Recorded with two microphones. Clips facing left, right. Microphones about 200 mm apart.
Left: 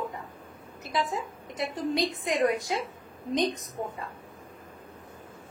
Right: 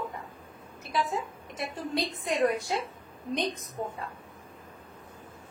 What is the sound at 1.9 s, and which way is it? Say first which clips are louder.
Speech: even; 15° left (ahead or behind).